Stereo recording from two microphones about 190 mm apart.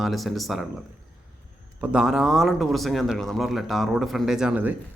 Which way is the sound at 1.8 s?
5° right (ahead or behind).